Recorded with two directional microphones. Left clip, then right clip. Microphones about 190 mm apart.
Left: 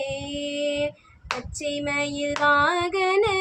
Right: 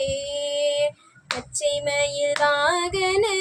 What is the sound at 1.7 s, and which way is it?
Child singing, 15° left (ahead or behind).